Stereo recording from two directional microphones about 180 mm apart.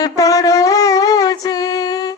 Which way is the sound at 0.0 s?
20° left (ahead or behind).